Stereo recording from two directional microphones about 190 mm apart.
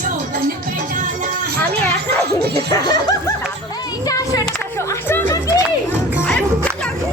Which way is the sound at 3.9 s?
20° left (ahead or behind).